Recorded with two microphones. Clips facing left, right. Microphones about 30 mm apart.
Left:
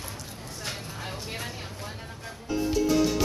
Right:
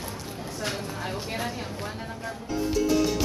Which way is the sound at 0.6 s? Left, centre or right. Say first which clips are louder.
Right 5 dB; centre.